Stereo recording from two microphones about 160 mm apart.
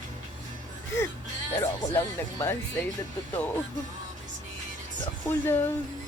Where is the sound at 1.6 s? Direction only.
15° left (ahead or behind).